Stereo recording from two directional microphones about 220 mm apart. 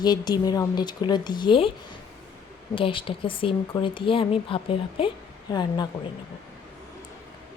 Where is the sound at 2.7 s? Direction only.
25° left (ahead or behind).